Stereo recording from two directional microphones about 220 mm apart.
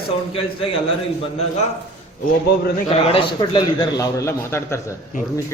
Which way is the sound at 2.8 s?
25° left (ahead or behind).